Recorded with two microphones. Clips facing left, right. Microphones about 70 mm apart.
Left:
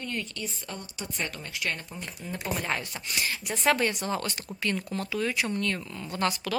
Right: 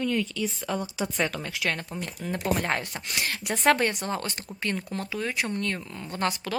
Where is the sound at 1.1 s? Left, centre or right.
Right.